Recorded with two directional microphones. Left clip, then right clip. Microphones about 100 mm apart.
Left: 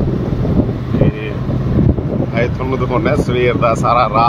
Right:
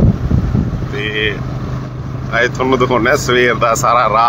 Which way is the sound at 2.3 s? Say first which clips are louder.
Right 8 dB; 10° right (ahead or behind).